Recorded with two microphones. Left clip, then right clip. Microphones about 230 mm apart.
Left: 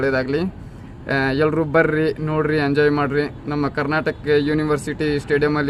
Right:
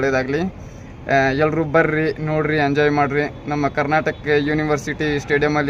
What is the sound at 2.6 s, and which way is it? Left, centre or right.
Speech, right.